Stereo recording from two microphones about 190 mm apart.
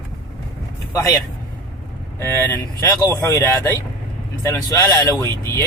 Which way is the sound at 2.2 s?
10° left (ahead or behind).